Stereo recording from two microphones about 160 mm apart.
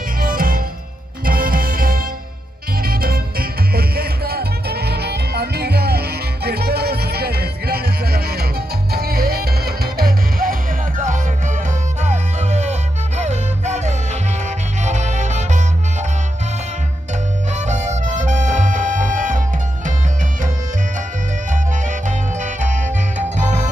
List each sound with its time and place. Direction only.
0.2 s music: 65° right (ahead or behind)
12.0 s music: 45° right (ahead or behind)
17.6 s music: 45° right (ahead or behind)
21.5 s music: 50° right (ahead or behind)